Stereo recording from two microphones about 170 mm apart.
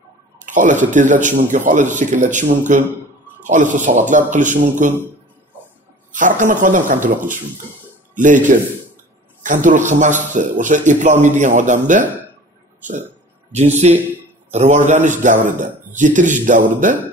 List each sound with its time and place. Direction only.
0.5 s a man's voice: 50° right (ahead or behind)
6.1 s a man's voice: 50° right (ahead or behind)
13.5 s a man's voice: 40° right (ahead or behind)